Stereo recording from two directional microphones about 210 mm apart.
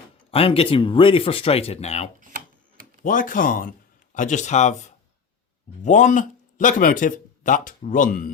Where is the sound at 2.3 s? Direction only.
40° right (ahead or behind).